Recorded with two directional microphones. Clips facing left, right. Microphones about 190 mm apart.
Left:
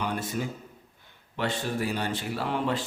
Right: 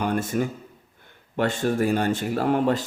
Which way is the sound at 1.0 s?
50° right (ahead or behind).